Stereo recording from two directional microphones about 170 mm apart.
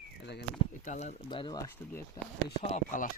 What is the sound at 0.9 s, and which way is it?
Speech, 45° left (ahead or behind).